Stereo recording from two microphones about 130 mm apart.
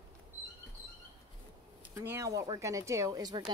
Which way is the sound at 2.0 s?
20° right (ahead or behind).